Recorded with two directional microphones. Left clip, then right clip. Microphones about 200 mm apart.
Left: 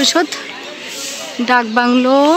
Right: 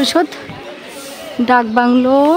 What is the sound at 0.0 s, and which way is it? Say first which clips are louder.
Speech: left 1 dB; 15° right (ahead or behind).